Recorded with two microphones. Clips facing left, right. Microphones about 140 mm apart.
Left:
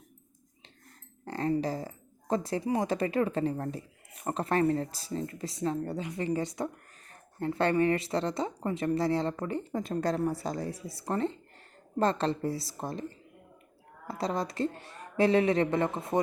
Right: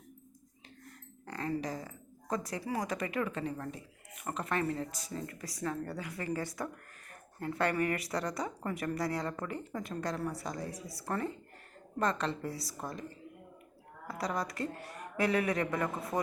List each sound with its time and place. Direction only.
1.2 s a sound: 30° left (ahead or behind)
1.6 s speech: 30° left (ahead or behind)
14.1 s speech: 25° left (ahead or behind)